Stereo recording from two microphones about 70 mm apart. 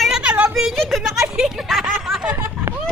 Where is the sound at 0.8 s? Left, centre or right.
Centre.